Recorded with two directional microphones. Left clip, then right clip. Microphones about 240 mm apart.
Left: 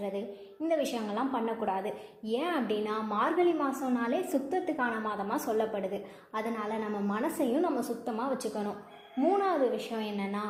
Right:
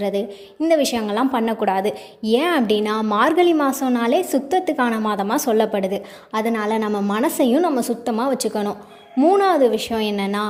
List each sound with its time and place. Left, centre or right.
0.0 s a woman's voice: right